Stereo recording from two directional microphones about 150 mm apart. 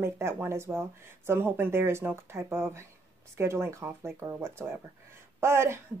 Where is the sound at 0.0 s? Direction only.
15° right (ahead or behind).